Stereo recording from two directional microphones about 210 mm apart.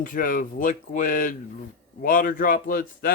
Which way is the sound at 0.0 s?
40° left (ahead or behind).